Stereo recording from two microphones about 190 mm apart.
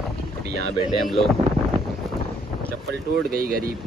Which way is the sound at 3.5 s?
50° right (ahead or behind).